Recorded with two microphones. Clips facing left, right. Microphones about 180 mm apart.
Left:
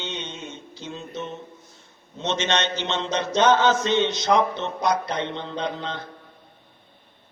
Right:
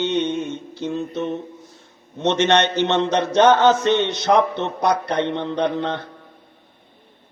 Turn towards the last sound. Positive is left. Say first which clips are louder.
# right 7 dB
turn(degrees=-65)  # may be behind; listen again after turning